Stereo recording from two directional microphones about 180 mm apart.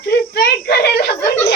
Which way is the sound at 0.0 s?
65° left (ahead or behind).